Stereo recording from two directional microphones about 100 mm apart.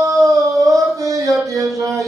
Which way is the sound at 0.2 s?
35° right (ahead or behind).